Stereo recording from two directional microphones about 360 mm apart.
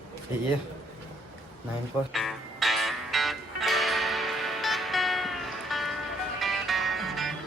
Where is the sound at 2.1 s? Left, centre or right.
Centre.